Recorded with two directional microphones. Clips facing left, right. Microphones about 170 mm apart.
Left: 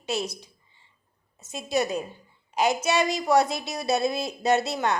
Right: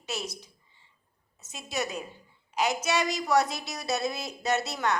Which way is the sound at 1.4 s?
30° left (ahead or behind).